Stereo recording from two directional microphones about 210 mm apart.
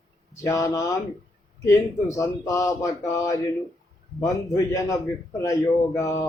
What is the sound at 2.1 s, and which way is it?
Speech, 15° left (ahead or behind).